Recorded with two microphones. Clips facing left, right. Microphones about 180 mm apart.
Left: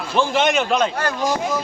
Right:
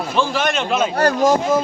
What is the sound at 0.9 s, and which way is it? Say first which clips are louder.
Speech: right 7 dB; 40° right (ahead or behind).